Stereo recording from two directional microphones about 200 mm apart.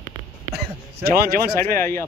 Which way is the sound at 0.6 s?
55° right (ahead or behind).